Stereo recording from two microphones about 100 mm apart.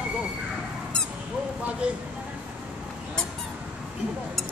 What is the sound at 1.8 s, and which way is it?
Speech, 10° right (ahead or behind).